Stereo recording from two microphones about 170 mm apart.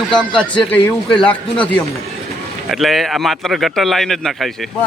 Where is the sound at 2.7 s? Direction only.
Centre (ahead or behind).